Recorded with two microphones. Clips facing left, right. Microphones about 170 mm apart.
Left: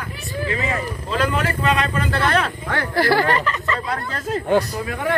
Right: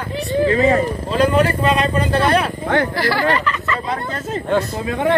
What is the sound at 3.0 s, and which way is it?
Speech, 50° left (ahead or behind).